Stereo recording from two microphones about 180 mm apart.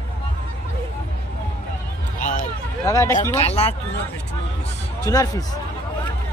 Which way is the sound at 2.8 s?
20° left (ahead or behind).